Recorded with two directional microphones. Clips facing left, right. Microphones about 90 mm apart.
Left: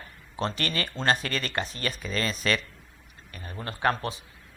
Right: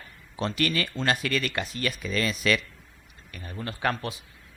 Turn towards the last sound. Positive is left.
turn(degrees=35)  # may be behind; listen again after turning